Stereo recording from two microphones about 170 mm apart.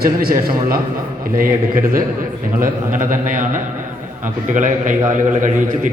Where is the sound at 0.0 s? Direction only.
60° right (ahead or behind).